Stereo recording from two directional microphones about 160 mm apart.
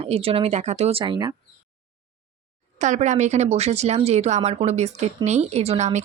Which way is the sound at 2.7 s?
50° right (ahead or behind).